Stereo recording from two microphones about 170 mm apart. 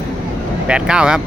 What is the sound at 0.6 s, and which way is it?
Speech, 5° right (ahead or behind).